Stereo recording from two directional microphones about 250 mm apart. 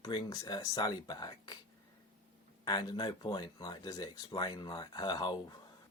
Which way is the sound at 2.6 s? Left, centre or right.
Centre.